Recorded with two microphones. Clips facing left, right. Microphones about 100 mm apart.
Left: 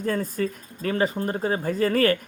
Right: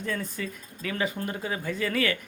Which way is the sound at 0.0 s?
40° left (ahead or behind).